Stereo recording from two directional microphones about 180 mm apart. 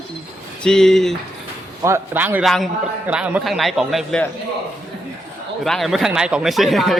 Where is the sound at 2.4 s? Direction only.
Centre (ahead or behind).